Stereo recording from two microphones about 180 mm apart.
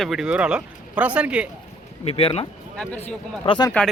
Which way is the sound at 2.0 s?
35° left (ahead or behind).